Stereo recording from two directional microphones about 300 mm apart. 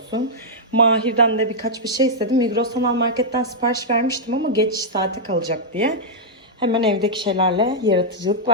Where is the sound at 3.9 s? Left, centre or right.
Right.